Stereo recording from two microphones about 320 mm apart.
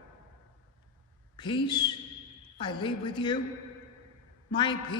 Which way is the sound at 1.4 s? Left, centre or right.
Centre.